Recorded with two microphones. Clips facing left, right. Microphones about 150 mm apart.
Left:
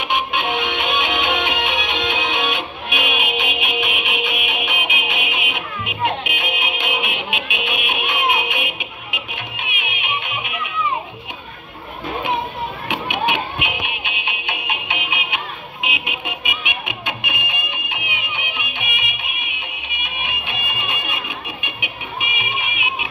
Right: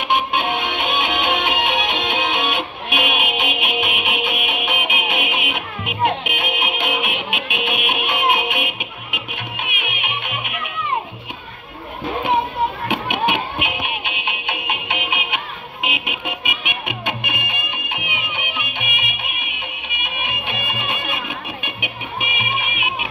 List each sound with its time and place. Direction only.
0.1 s music: 50° right (ahead or behind)
12.8 s music: 55° right (ahead or behind)
22.2 s music: 50° right (ahead or behind)